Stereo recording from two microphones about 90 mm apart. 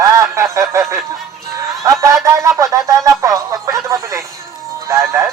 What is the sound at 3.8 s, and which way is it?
Music, 35° right (ahead or behind).